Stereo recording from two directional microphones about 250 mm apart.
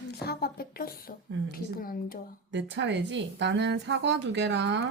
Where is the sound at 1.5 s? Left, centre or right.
Left.